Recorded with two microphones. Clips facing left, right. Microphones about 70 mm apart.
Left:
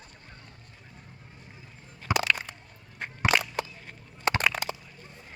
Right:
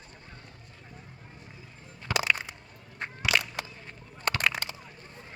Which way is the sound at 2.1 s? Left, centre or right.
Centre.